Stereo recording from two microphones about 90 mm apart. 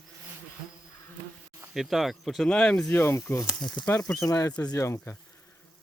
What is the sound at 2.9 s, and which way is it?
Speech, 30° left (ahead or behind).